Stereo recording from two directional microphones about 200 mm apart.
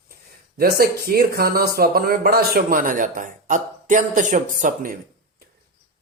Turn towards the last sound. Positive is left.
turn(degrees=-40)  # may be behind; listen again after turning